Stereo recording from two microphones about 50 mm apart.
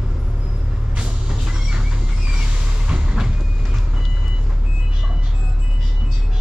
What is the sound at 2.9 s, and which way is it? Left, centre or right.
Vehicle, centre.